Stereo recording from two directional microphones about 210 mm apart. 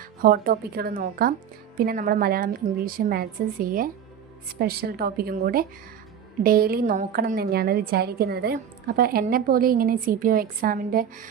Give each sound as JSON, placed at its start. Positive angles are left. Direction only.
{"t": 0.2, "sound": "a woman's voice", "side_deg": -45}